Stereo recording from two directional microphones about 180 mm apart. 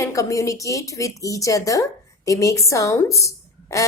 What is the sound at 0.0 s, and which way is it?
Speech, 15° left (ahead or behind).